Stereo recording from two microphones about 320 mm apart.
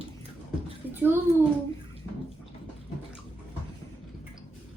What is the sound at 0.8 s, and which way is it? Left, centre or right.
Bathtub, centre.